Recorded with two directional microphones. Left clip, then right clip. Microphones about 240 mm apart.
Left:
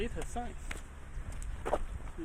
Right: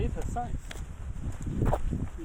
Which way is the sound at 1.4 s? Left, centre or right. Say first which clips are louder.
Right 3 dB; centre.